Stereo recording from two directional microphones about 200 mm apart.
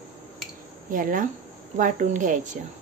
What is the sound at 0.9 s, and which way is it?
Speech, 45° right (ahead or behind).